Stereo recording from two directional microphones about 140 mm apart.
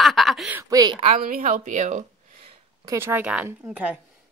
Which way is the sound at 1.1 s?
90° right.